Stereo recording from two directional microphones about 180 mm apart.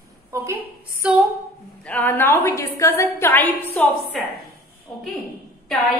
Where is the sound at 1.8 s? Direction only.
10° left (ahead or behind).